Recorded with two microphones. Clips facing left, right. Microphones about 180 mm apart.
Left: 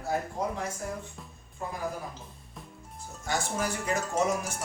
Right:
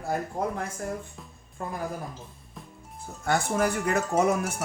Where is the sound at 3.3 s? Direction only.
60° right (ahead or behind).